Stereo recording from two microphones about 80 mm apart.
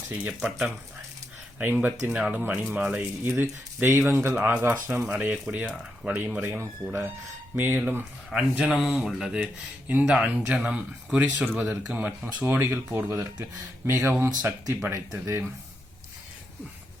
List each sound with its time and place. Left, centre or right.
0.3 s speech: centre
1.5 s speech: right
5.2 s speech: centre
6.1 s speech: right